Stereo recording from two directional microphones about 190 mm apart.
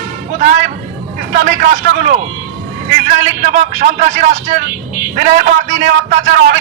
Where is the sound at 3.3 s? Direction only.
35° right (ahead or behind).